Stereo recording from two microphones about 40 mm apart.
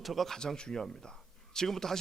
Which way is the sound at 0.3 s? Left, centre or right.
Centre.